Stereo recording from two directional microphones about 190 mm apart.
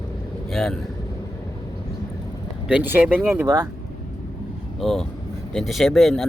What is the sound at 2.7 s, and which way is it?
Speech, 10° right (ahead or behind).